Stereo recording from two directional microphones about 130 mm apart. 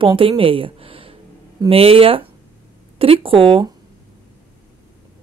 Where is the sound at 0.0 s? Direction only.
40° right (ahead or behind).